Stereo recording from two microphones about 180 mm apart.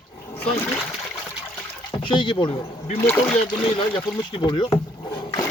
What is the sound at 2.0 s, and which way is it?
Speech, 30° left (ahead or behind).